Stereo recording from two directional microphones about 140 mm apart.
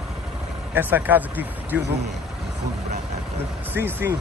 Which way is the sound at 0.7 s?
10° right (ahead or behind).